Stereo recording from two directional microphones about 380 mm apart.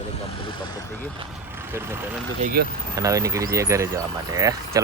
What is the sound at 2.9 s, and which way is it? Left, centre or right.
Speech, centre.